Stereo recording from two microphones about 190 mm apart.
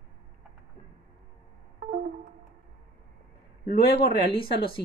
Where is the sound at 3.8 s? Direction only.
55° left (ahead or behind).